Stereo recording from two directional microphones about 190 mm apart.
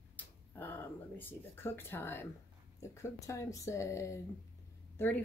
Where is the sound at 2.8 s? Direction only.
15° left (ahead or behind).